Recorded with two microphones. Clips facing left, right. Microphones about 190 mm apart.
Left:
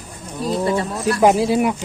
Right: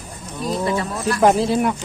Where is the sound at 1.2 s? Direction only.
10° left (ahead or behind).